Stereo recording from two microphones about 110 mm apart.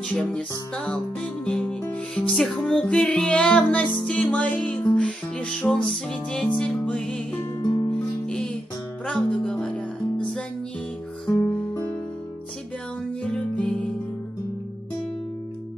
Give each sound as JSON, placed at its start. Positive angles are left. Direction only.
{"t": 0.1, "sound": "music", "side_deg": 15}
{"t": 7.6, "sound": "music", "side_deg": 45}
{"t": 7.9, "sound": "music", "side_deg": 5}
{"t": 11.4, "sound": "music", "side_deg": 20}
{"t": 13.2, "sound": "music", "side_deg": 10}